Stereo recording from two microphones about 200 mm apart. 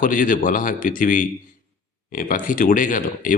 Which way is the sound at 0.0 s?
45° left (ahead or behind).